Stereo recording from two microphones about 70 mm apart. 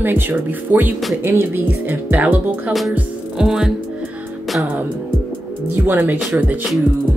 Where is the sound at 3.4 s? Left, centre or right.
Centre.